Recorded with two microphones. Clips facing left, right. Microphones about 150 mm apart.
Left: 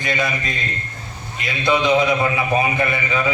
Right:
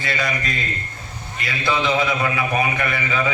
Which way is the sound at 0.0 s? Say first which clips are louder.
Left 2 dB; 20° left (ahead or behind).